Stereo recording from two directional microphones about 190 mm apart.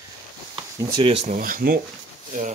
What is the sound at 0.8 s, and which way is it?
Speech, 20° right (ahead or behind).